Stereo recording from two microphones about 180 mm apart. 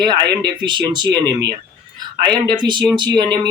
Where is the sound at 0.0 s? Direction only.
25° right (ahead or behind).